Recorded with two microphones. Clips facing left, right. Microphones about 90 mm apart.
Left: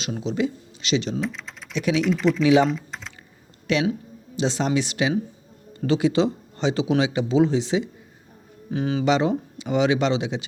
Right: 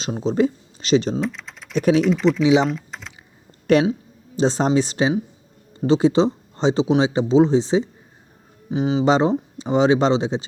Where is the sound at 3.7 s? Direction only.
45° right (ahead or behind).